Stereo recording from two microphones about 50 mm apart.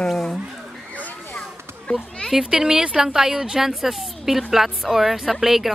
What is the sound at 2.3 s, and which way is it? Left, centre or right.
A woman's voice, centre.